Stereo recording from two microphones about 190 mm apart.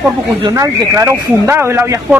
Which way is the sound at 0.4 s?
20° right (ahead or behind).